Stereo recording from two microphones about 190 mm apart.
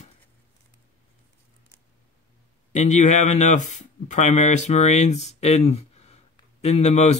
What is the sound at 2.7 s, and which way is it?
Speech, 40° left (ahead or behind).